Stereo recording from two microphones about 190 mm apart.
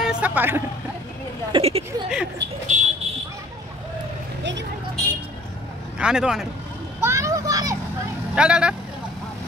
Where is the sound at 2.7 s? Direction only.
40° right (ahead or behind).